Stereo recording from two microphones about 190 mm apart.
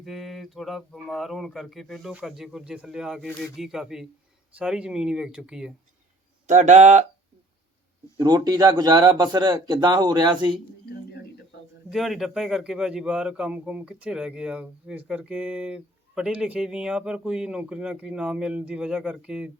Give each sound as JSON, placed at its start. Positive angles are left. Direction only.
{"t": 0.0, "sound": "a man's voice", "side_deg": 0}
{"t": 6.5, "sound": "speech", "side_deg": -40}
{"t": 8.2, "sound": "speech", "side_deg": -20}
{"t": 11.9, "sound": "a man's voice", "side_deg": 0}